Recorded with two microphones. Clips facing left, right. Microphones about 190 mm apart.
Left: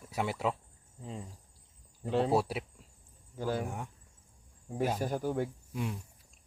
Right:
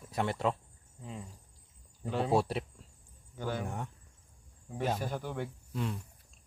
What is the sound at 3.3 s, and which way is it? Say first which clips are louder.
Speech: left 3 dB; 35° left (ahead or behind).